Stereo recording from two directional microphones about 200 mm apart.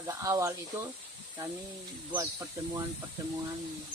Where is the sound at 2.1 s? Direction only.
15° right (ahead or behind).